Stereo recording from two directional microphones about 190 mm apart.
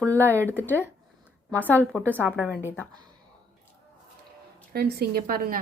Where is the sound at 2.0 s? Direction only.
10° right (ahead or behind).